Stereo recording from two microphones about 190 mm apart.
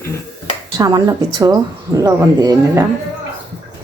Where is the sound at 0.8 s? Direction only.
20° right (ahead or behind).